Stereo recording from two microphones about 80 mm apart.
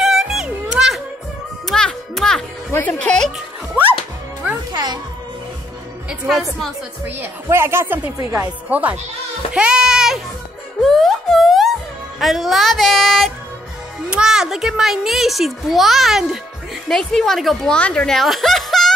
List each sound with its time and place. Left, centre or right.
0.0 s music: centre
1.7 s music: centre
2.7 s speech: centre
6.0 s a child's voice: centre
7.4 s speech: right
8.6 s speech: centre
9.5 s a sound: centre
10.8 s music: centre
12.2 s a child's voice: centre
14.1 s a child's voice: centre